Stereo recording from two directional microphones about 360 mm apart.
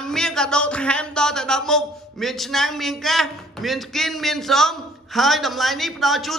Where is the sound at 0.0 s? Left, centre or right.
Centre.